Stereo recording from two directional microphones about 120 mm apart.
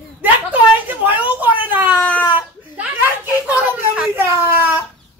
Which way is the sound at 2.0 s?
10° left (ahead or behind).